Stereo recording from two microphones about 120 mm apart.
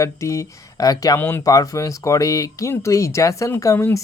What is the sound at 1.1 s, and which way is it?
Speech, 20° left (ahead or behind).